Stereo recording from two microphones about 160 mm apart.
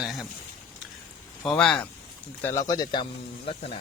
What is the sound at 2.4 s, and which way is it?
Speech, 20° left (ahead or behind).